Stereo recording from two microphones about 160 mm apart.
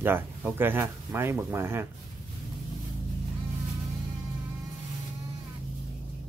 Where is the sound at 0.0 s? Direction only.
10° right (ahead or behind).